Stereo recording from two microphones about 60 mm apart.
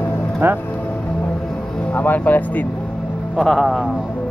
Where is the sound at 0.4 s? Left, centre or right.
Right.